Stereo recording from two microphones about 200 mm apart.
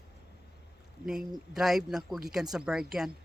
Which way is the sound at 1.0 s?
Centre (ahead or behind).